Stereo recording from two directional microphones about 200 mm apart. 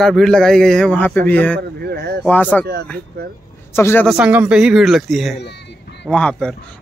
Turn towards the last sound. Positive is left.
turn(degrees=5)  # may be behind; listen again after turning